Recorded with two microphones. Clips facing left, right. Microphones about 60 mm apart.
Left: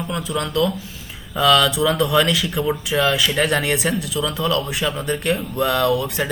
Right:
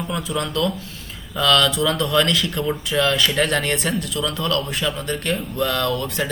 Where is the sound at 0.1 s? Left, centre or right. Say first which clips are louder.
Left 2 dB; centre.